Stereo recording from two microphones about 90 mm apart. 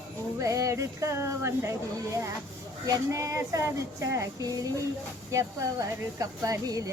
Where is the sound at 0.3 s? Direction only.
35° right (ahead or behind).